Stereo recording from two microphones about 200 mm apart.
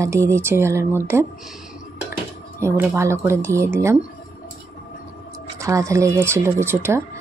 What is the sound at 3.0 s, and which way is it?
Speech, 15° right (ahead or behind).